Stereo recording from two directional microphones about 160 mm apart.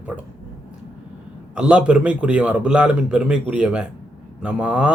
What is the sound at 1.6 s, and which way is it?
Speech, 5° right (ahead or behind).